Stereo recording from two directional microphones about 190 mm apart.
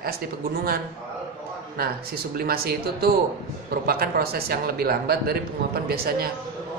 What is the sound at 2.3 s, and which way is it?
Speech, 55° right (ahead or behind).